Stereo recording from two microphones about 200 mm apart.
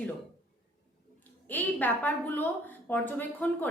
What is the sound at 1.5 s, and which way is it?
A woman's voice, 10° left (ahead or behind).